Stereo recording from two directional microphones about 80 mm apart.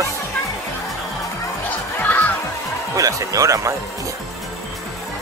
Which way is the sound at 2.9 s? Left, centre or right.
Right.